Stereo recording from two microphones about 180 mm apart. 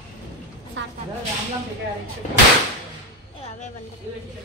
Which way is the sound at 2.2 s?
40° left (ahead or behind).